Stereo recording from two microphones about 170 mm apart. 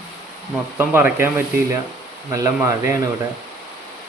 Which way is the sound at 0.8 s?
15° right (ahead or behind).